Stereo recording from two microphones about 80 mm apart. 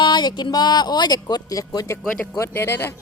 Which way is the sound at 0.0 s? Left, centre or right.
Left.